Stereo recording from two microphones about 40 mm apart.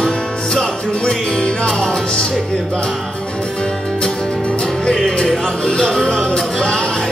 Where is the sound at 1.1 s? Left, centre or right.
Left.